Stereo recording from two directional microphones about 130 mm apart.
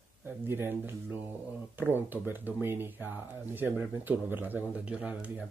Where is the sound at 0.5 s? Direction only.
15° right (ahead or behind).